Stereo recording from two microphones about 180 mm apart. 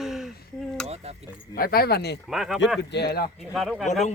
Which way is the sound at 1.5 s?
55° left (ahead or behind).